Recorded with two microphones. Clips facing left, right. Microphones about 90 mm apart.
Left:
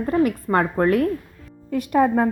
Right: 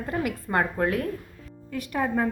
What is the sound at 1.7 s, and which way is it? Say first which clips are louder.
Speech: left 9 dB; 25° left (ahead or behind).